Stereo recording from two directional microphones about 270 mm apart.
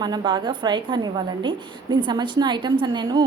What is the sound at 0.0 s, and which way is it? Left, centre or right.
A woman's voice, centre.